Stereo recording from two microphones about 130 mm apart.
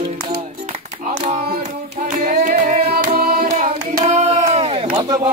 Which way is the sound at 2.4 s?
80° right.